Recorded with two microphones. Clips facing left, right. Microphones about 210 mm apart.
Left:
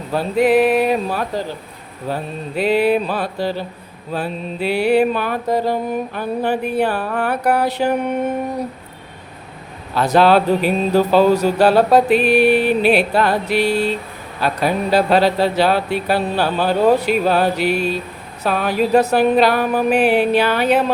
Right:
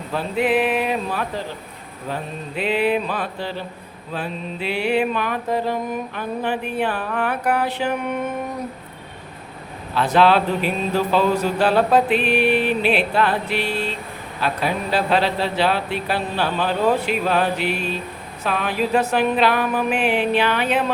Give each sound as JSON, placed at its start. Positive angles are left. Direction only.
{"t": 0.1, "sound": "music", "side_deg": 40}
{"t": 2.6, "sound": "music", "side_deg": 40}
{"t": 9.9, "sound": "music", "side_deg": 40}